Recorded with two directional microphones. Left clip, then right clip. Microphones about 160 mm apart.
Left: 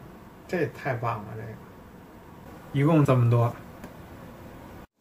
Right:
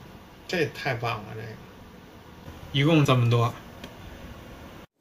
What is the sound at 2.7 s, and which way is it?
Speech, 15° left (ahead or behind).